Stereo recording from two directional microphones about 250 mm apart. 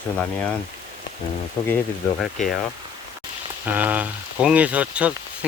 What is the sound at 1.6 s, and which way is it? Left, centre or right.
Speech, centre.